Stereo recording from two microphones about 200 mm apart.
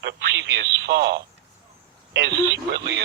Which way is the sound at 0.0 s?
60° right (ahead or behind).